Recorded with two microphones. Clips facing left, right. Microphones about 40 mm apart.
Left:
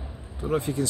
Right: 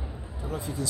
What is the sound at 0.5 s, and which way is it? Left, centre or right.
Speech, left.